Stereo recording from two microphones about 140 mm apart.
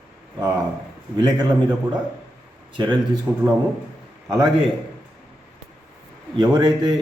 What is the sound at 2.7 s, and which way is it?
Speech, 35° right (ahead or behind).